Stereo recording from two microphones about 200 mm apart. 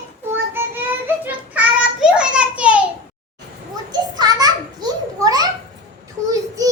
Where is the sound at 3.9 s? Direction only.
20° right (ahead or behind).